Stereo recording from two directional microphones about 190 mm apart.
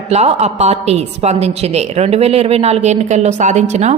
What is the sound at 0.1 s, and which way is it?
A woman's voice, 35° right (ahead or behind).